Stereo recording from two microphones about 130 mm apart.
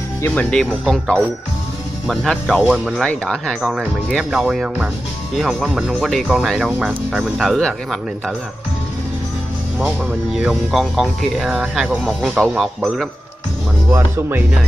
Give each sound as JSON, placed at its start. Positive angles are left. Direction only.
{"t": 0.2, "sound": "speech", "side_deg": 10}
{"t": 9.8, "sound": "speech", "side_deg": 0}
{"t": 13.8, "sound": "speech", "side_deg": -15}